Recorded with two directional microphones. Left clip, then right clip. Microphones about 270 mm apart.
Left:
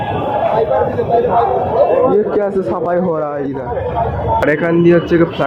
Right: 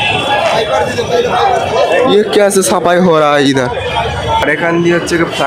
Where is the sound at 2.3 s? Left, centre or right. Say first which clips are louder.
Right 6 dB; right.